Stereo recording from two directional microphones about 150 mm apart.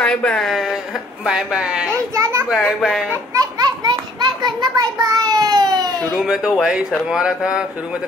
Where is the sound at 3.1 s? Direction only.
25° right (ahead or behind).